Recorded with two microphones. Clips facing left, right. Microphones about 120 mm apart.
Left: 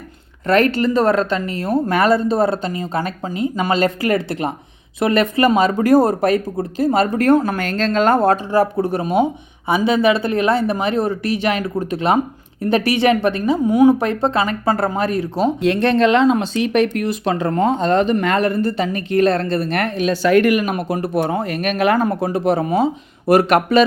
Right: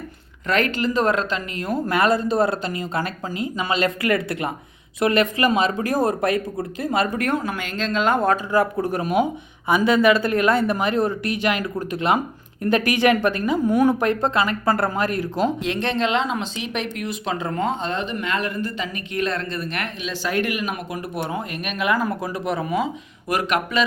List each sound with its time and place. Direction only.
0.4 s speech: 40° left (ahead or behind)
3.5 s speech: 40° left (ahead or behind)
13.7 s speech: 20° left (ahead or behind)
14.0 s speech: 35° left (ahead or behind)
15.6 s speech: 50° left (ahead or behind)
21.3 s speech: 40° left (ahead or behind)